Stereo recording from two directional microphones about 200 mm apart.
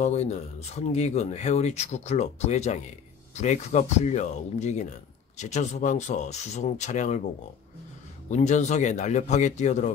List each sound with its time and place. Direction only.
0.0 s speech: 35° left (ahead or behind)
8.3 s speech: 35° left (ahead or behind)